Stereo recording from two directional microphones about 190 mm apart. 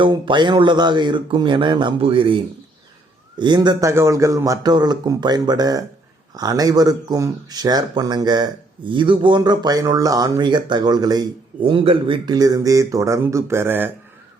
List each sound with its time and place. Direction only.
0.0 s speech: 25° right (ahead or behind)